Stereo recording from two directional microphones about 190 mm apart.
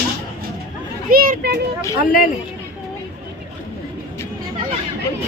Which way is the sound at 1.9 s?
50° left (ahead or behind).